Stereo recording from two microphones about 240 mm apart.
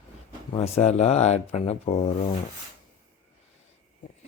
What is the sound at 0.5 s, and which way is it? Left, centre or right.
Speech, left.